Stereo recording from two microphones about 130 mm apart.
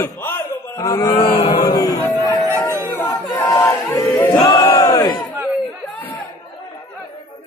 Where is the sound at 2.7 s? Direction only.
20° right (ahead or behind).